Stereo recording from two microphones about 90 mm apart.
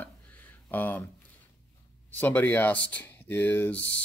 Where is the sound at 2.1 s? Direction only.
20° left (ahead or behind).